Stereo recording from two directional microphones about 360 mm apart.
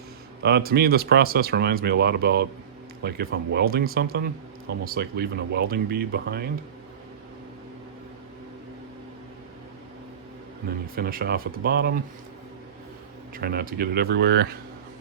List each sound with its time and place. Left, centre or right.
0.4 s speech: right
10.7 s speech: right
13.3 s speech: right